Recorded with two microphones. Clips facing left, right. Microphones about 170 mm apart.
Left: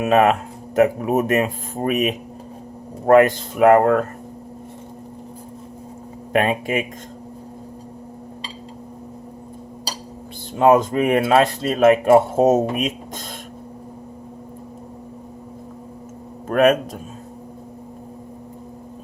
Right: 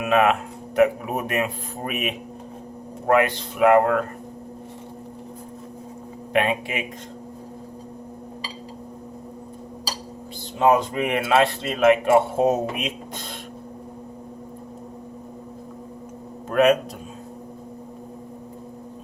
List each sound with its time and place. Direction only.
0.0 s speech: 40° left (ahead or behind)
6.3 s speech: 40° left (ahead or behind)
10.6 s speech: 45° left (ahead or behind)
16.5 s a sound: 50° left (ahead or behind)